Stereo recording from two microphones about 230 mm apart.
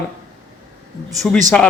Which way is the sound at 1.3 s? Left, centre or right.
Centre.